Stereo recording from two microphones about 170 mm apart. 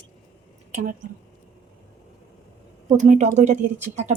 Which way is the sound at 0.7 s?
45° right (ahead or behind).